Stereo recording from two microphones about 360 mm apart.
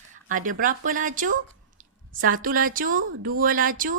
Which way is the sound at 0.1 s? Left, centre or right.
Right.